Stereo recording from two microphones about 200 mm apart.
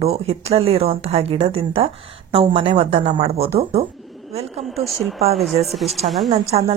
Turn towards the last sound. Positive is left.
turn(degrees=-25)  # may be behind; listen again after turning